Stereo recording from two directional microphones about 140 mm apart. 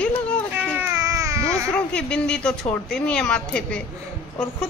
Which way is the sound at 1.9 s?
5° left (ahead or behind).